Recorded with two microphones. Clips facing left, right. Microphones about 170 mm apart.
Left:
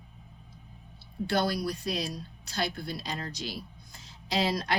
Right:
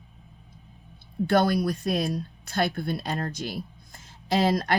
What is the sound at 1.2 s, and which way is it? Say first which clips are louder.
A woman's voice: right 6 dB; 55° right (ahead or behind).